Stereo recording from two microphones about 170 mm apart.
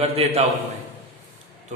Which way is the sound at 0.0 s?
35° right (ahead or behind).